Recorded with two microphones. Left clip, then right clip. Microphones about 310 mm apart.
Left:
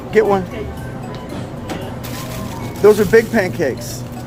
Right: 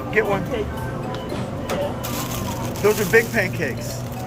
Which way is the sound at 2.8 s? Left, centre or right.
Centre.